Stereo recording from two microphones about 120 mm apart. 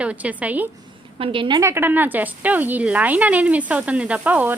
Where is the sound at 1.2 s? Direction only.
45° right (ahead or behind).